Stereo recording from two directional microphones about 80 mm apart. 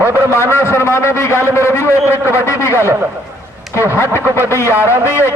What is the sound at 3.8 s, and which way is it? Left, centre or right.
Speech, left.